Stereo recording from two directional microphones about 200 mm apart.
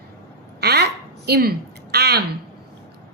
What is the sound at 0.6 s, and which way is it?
A woman's voice, 55° right (ahead or behind).